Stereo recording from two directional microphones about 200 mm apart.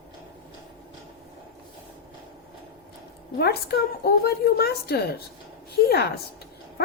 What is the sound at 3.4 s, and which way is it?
A woman's voice, 50° left (ahead or behind).